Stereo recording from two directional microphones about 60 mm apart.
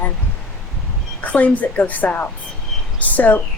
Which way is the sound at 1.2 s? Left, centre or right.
Left.